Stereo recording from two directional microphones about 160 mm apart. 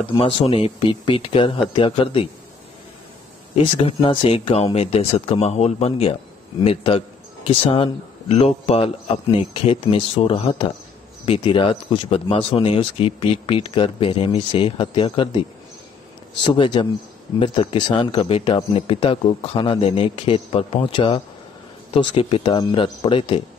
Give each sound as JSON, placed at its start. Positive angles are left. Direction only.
{"t": 0.0, "sound": "speech", "side_deg": 35}
{"t": 3.5, "sound": "speech", "side_deg": 35}
{"t": 16.4, "sound": "speech", "side_deg": 30}